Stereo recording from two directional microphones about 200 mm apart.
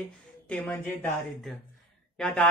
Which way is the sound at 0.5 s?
10° left (ahead or behind).